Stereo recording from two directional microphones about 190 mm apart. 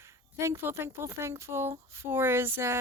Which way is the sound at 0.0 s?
15° right (ahead or behind).